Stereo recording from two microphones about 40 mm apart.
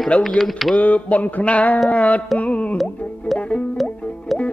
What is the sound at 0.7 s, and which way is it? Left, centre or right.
Speech, left.